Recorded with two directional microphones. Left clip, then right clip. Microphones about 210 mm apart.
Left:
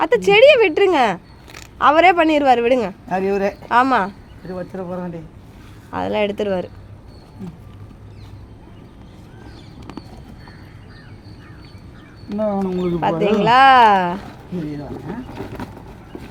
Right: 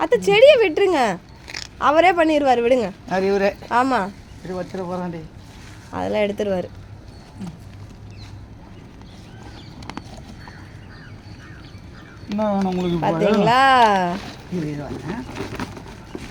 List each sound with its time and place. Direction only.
0.0 s speech: 5° left (ahead or behind)
3.1 s speech: 20° left (ahead or behind)
3.7 s speech: 5° left (ahead or behind)
4.5 s speech: 15° left (ahead or behind)
5.9 s speech: centre (ahead or behind)
12.3 s speech: 15° right (ahead or behind)
13.0 s speech: centre (ahead or behind)